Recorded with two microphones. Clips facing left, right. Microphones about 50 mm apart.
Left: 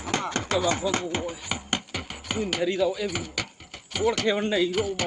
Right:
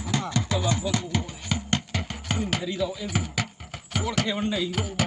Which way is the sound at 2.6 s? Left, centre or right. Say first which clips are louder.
Left 5 dB; left.